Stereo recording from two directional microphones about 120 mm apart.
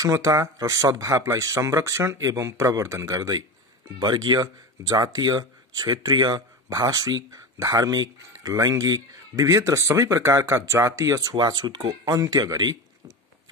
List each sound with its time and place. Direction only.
0.0 s speech: 30° right (ahead or behind)